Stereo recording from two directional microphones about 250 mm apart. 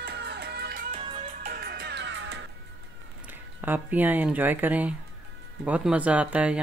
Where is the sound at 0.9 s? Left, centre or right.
Right.